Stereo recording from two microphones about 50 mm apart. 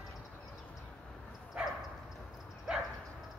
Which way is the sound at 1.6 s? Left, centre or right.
Right.